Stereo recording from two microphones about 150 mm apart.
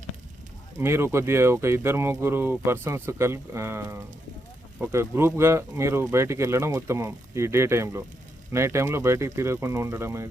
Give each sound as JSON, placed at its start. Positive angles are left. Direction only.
{"t": 0.8, "sound": "speech", "side_deg": -15}